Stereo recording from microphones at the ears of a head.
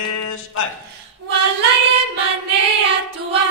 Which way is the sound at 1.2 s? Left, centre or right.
Right.